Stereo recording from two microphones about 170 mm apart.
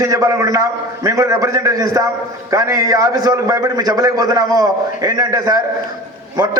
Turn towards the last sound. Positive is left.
turn(degrees=-25)  # may be behind; listen again after turning